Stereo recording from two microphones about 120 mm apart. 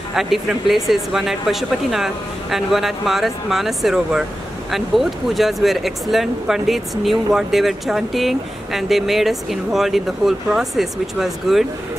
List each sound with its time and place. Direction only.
0.1 s speech: 5° right (ahead or behind)